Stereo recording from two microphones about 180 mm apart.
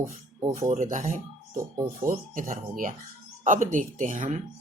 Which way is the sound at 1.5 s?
15° right (ahead or behind).